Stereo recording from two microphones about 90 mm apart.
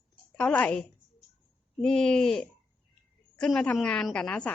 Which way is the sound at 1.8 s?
10° left (ahead or behind).